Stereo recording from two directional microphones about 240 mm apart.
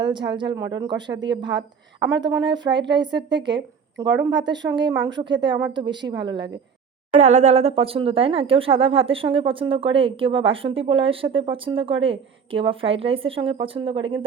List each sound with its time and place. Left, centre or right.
0.0 s speech: centre
2.0 s a woman's voice: right
2.3 s speech: centre